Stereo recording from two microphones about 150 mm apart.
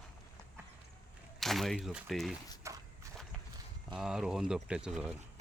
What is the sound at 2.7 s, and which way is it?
Walk, 20° right (ahead or behind).